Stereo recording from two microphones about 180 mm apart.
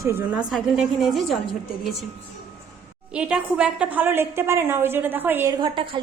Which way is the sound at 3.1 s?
5° right (ahead or behind).